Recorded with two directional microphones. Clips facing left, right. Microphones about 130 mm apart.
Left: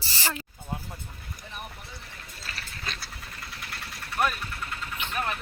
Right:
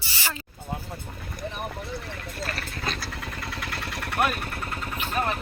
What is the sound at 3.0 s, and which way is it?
Vehicle, 90° right.